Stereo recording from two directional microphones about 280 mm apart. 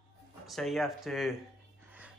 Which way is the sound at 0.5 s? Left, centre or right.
Centre.